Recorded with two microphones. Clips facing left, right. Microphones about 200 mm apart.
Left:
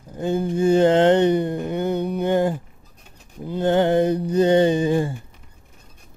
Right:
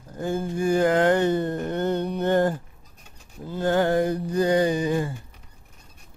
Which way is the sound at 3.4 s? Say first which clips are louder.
Left 3 dB; 20° left (ahead or behind).